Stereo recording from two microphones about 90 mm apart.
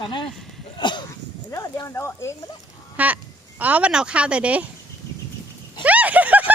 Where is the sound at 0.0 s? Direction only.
65° left (ahead or behind).